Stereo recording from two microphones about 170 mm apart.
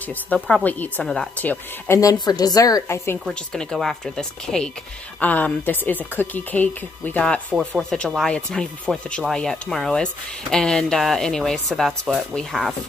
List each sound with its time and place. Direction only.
0.3 s a woman's voice: 5° left (ahead or behind)
2.0 s speech: 20° left (ahead or behind)
3.3 s a woman's voice: centre (ahead or behind)